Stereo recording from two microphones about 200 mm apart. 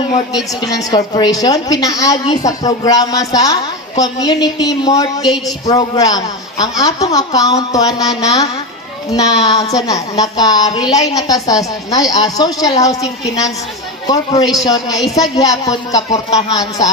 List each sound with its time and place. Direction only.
0.6 s a woman's voice: 20° left (ahead or behind)